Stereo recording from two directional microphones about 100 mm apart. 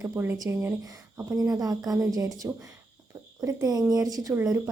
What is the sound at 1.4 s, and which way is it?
A woman's voice, 35° right (ahead or behind).